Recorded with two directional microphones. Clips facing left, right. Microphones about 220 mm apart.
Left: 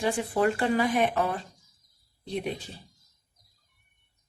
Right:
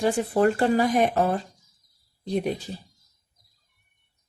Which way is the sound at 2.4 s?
40° right (ahead or behind).